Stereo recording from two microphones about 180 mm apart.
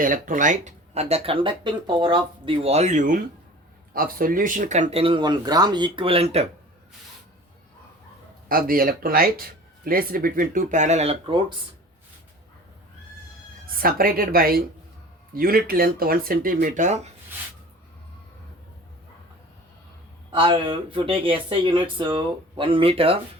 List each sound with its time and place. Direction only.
0.0 s speech: 50° right (ahead or behind)
8.4 s speech: 55° right (ahead or behind); by 11.5 s 25° right (ahead or behind)
13.7 s speech: 55° right (ahead or behind)
20.3 s speech: 30° right (ahead or behind)